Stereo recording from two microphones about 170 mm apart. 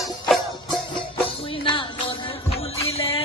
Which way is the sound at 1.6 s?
30° left (ahead or behind).